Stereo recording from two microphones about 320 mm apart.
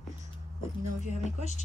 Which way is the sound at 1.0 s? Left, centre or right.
Left.